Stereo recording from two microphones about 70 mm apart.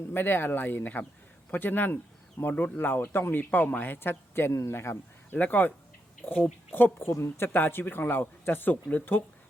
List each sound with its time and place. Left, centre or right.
0.1 s speech: left
5.4 s speech: left